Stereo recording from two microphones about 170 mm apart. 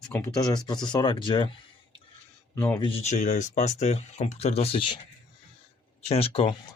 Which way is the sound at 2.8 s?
35° left (ahead or behind).